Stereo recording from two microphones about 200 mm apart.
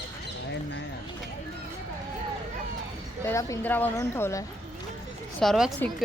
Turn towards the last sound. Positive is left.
turn(degrees=0)  # may be behind; listen again after turning